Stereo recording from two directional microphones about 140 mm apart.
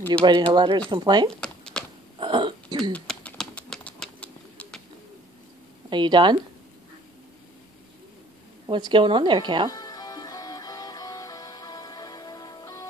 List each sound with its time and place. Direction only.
0.2 s speech: 35° right (ahead or behind)
1.4 s a sound: 5° left (ahead or behind)
2.1 s a sound: 35° right (ahead or behind)
2.9 s pigeon: 5° left (ahead or behind)
5.9 s speech: 35° right (ahead or behind)
8.6 s speech: 35° right (ahead or behind)
9.7 s music: 25° left (ahead or behind)